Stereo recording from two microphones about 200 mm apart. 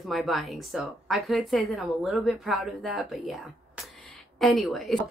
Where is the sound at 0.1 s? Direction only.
Centre (ahead or behind).